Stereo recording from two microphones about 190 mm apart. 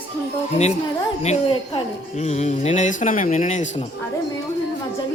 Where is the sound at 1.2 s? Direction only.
35° left (ahead or behind).